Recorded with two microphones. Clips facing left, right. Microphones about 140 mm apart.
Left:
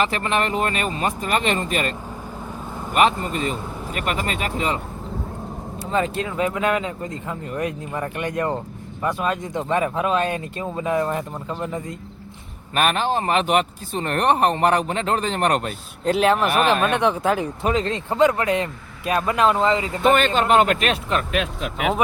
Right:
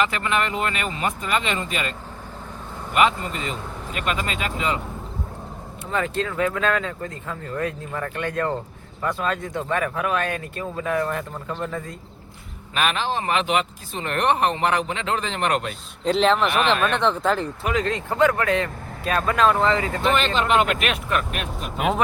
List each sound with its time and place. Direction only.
0.0 s speech: 35° left (ahead or behind)
5.9 s speech: 20° left (ahead or behind)
12.7 s speech: 45° left (ahead or behind)
16.0 s speech: 10° left (ahead or behind)
17.7 s speech: 30° left (ahead or behind)
20.0 s speech: 50° left (ahead or behind)
21.3 s speech: 90° left